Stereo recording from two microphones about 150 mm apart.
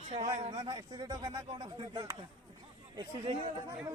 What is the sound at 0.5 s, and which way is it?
Speech, 30° right (ahead or behind).